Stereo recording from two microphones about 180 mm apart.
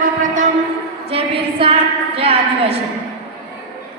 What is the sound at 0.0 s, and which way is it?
Shofar, 45° right (ahead or behind).